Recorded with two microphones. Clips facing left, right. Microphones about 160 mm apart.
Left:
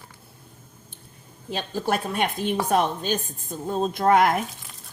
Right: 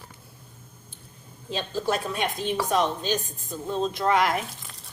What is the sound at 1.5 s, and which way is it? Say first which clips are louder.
A woman's voice: left 1 dB; 55° left (ahead or behind).